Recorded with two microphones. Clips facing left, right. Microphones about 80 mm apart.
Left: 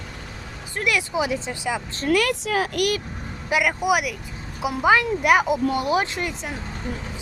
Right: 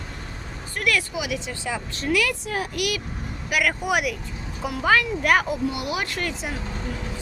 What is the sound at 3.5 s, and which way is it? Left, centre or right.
Speech, centre.